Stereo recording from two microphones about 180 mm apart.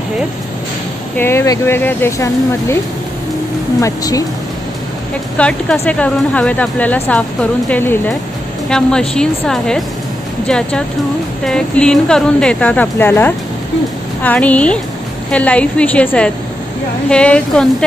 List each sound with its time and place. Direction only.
1.1 s speech: 15° left (ahead or behind)
3.8 s speech: 20° left (ahead or behind)
5.4 s a woman's voice: 5° left (ahead or behind)